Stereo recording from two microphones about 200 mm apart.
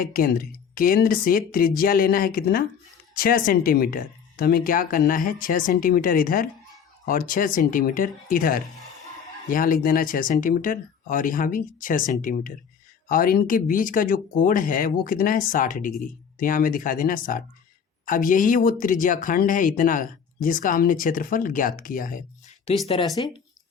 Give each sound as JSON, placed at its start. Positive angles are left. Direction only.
{"t": 0.0, "sound": "speech", "side_deg": 45}
{"t": 22.9, "sound": "speech", "side_deg": 20}